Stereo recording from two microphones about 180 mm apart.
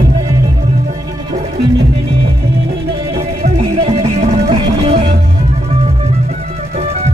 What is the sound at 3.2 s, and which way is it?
Music, 35° right (ahead or behind).